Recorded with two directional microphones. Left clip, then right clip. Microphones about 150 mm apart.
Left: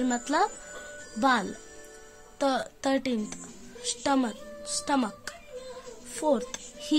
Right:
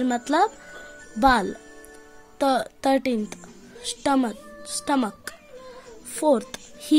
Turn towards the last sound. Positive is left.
turn(degrees=-30)  # may be behind; listen again after turning